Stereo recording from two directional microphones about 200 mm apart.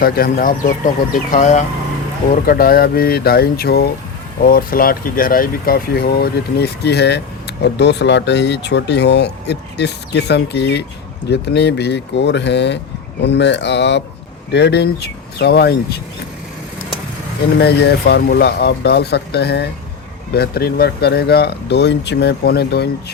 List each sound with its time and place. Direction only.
0.0 s speech: 45° left (ahead or behind)
2.3 s speech: 45° left (ahead or behind)
17.6 s speech: 55° left (ahead or behind)